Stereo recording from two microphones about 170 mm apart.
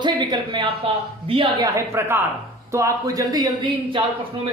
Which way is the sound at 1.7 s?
15° right (ahead or behind).